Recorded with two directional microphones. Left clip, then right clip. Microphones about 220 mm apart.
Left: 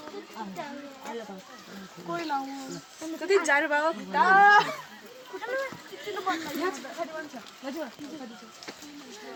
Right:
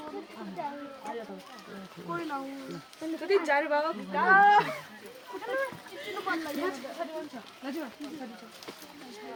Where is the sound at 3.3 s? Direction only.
35° left (ahead or behind); by 4.6 s 50° left (ahead or behind).